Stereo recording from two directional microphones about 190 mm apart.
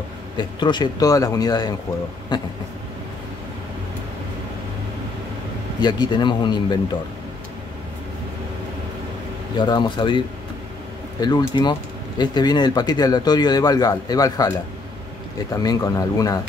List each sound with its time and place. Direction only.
0.4 s speech: 25° left (ahead or behind)
5.8 s speech: 20° left (ahead or behind)
9.6 s speech: 25° left (ahead or behind)